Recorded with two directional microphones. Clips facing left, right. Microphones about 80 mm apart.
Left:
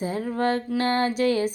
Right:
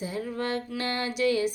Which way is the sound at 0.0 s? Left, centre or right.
Left.